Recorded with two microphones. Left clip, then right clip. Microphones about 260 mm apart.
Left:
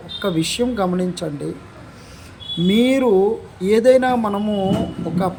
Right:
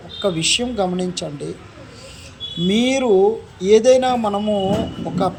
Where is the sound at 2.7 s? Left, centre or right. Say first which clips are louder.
Left 1 dB; centre.